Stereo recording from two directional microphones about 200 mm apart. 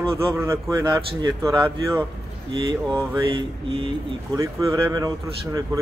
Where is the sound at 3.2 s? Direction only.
25° right (ahead or behind).